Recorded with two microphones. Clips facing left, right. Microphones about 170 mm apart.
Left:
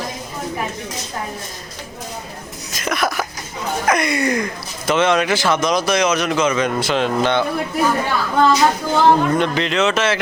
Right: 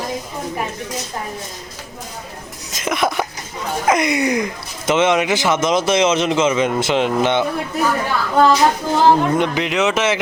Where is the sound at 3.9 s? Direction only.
20° right (ahead or behind).